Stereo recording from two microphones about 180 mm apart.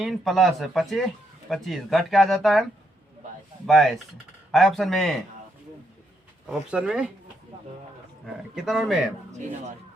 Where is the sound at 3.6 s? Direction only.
Centre (ahead or behind).